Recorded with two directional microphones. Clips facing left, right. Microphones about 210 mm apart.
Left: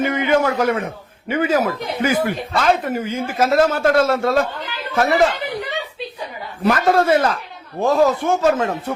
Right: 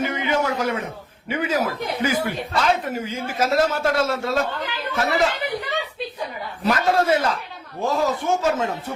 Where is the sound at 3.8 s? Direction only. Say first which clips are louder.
Left 6 dB; 60° left (ahead or behind).